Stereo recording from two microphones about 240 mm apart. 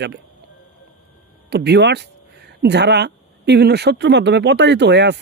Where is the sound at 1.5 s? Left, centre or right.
Right.